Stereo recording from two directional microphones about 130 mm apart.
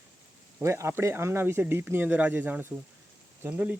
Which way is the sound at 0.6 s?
20° right (ahead or behind).